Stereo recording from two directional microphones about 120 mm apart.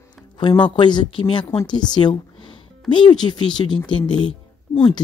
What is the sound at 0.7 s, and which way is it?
Speech, 40° left (ahead or behind).